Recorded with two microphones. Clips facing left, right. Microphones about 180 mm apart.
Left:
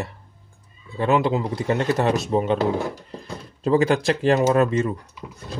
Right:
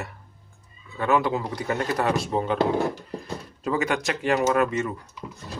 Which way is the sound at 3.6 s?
30° left (ahead or behind).